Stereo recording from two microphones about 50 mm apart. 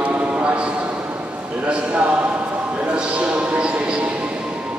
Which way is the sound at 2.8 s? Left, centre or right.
Right.